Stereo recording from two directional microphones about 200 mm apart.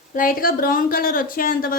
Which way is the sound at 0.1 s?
45° left (ahead or behind).